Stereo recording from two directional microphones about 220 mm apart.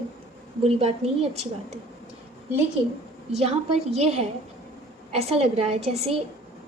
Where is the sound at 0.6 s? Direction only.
25° right (ahead or behind).